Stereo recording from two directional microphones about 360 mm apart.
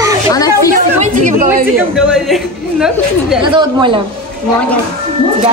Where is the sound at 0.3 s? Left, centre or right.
Centre.